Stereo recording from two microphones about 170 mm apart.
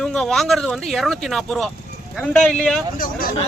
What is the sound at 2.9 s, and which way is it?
Speech, 55° left (ahead or behind).